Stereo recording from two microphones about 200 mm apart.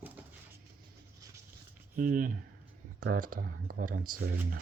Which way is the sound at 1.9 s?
45° right (ahead or behind).